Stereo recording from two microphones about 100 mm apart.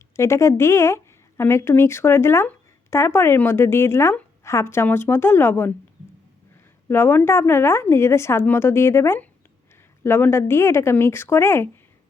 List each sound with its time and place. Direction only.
0.2 s a woman's voice: 30° left (ahead or behind)
6.8 s a woman's voice: 25° left (ahead or behind)